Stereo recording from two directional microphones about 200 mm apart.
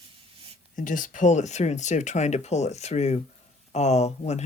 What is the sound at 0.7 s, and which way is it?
Speech, 40° left (ahead or behind).